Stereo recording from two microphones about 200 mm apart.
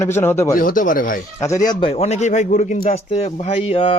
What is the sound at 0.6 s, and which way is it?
Speech, 45° left (ahead or behind).